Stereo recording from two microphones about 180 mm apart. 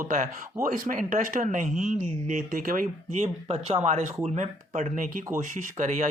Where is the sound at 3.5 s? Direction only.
35° right (ahead or behind).